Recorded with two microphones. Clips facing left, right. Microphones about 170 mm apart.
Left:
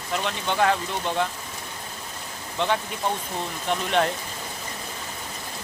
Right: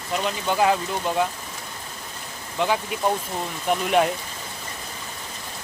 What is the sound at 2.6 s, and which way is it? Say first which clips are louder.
Speech: right 2 dB; 5° right (ahead or behind).